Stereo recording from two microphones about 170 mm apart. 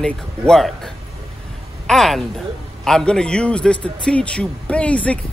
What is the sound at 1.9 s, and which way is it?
A man's voice, centre (ahead or behind).